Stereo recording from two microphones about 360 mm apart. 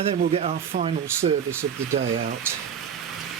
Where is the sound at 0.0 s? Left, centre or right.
Centre.